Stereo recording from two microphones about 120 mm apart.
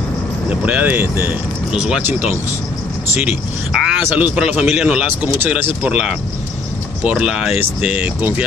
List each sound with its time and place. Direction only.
0.5 s speech: 10° right (ahead or behind)
1.7 s speech: 5° right (ahead or behind)